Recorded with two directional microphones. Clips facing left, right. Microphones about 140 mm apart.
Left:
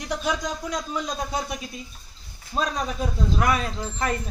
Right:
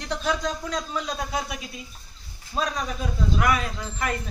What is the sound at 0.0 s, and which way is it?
Speech, 15° left (ahead or behind).